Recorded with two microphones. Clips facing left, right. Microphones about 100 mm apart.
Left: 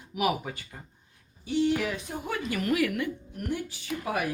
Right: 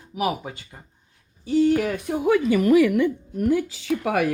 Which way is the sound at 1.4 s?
40° right (ahead or behind).